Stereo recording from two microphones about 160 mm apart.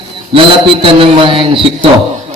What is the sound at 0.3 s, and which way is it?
A man's voice, 35° right (ahead or behind).